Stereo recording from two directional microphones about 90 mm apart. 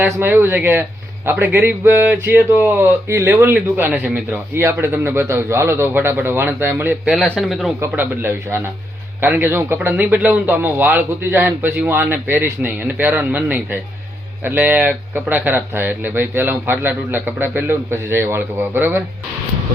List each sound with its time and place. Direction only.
0.2 s speech: 25° right (ahead or behind)
7.3 s speech: centre (ahead or behind)
7.9 s speech: 25° right (ahead or behind)